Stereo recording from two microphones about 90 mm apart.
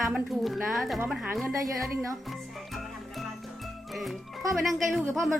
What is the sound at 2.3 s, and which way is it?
Music, centre (ahead or behind).